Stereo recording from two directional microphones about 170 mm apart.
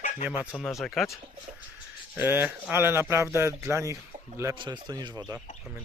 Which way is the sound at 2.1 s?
10° right (ahead or behind).